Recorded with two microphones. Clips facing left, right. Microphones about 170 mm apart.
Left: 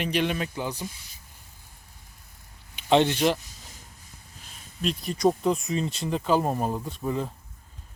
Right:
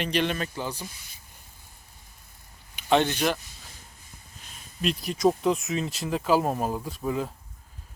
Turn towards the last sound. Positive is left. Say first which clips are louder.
# even
turn(degrees=-5)  # may be behind; listen again after turning